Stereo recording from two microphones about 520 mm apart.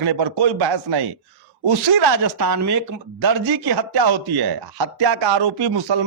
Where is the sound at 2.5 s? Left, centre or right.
Right.